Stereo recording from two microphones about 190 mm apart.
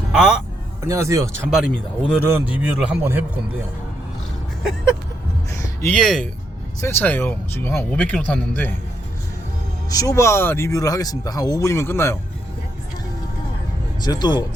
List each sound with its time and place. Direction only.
0.1 s a man's voice: centre (ahead or behind)
0.9 s a man's voice: 15° right (ahead or behind)
1.5 s speech: 5° right (ahead or behind)
2.1 s a man's voice: 10° right (ahead or behind)
5.5 s a sound: 15° left (ahead or behind)
6.0 s speech: centre (ahead or behind)
9.9 s speech: 20° left (ahead or behind)
14.0 s speech: 20° left (ahead or behind)